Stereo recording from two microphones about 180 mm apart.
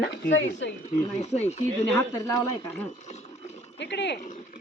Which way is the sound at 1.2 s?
35° left (ahead or behind).